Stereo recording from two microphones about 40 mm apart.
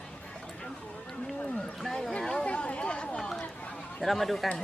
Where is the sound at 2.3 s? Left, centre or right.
Left.